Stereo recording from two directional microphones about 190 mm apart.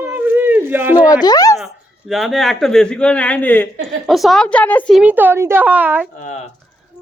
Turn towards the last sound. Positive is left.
turn(degrees=40)  # may be behind; listen again after turning